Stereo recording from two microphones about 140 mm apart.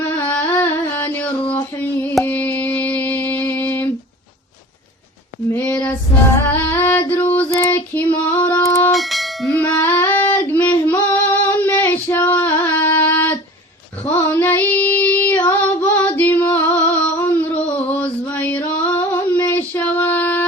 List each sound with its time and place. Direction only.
0.2 s a sound: 15° left (ahead or behind)
5.5 s a sound: 10° left (ahead or behind)
6.5 s music: 15° left (ahead or behind)
7.1 s female singing: 15° left (ahead or behind)
8.9 s bell: centre (ahead or behind)
9.6 s female singing: 10° left (ahead or behind)
14.1 s child singing: 15° left (ahead or behind)
17.9 s female singing: 10° left (ahead or behind)